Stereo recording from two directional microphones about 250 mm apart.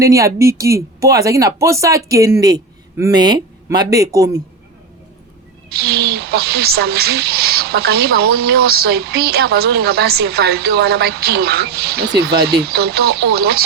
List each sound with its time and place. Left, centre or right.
0.0 s speech: centre
5.6 s speech: right